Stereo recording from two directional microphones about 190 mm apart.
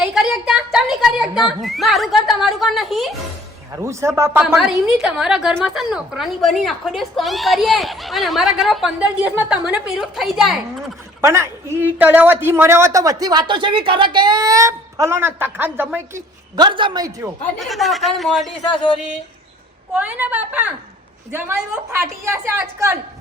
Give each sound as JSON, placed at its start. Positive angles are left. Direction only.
{"t": 0.0, "sound": "speech", "side_deg": -5}
{"t": 3.8, "sound": "a man's voice", "side_deg": -15}
{"t": 4.4, "sound": "a woman's voice", "side_deg": 0}
{"t": 11.2, "sound": "a man's voice", "side_deg": -15}
{"t": 16.6, "sound": "a woman's voice", "side_deg": -25}
{"t": 17.6, "sound": "a woman's voice", "side_deg": 0}
{"t": 19.9, "sound": "a man's voice", "side_deg": -5}